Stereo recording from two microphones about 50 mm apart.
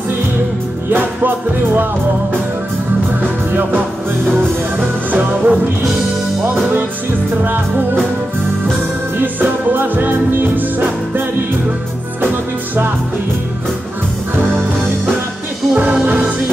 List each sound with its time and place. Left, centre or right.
0.9 s music: right
3.2 s music: right
7.4 s music: right
9.2 s music: right
15.7 s music: right